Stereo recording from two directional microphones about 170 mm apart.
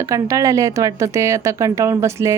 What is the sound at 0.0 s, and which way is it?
Speech, 20° right (ahead or behind).